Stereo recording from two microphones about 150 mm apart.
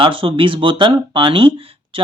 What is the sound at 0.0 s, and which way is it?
Speech, 35° right (ahead or behind).